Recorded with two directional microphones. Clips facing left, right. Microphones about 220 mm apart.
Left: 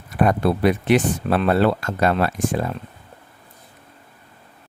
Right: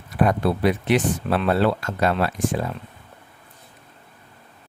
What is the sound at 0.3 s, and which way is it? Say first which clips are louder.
Speech: left 3 dB; 50° left (ahead or behind).